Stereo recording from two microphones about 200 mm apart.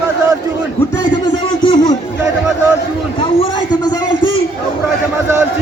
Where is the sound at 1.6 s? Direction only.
20° left (ahead or behind).